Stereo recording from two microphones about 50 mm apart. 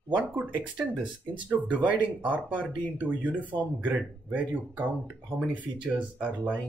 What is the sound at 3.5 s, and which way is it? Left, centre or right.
Speech, right.